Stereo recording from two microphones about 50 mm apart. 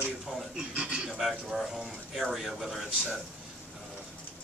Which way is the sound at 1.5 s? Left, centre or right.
Centre.